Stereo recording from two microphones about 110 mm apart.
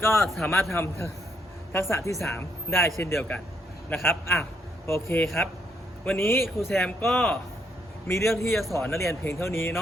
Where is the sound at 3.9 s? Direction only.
20° left (ahead or behind).